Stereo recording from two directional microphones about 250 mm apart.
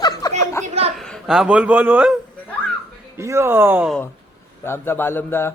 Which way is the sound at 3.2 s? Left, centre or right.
Centre.